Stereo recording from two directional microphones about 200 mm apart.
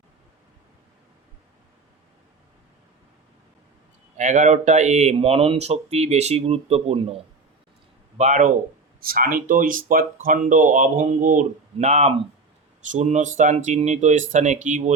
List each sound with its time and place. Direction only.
4.2 s speech: 40° right (ahead or behind)
8.2 s speech: 40° right (ahead or behind)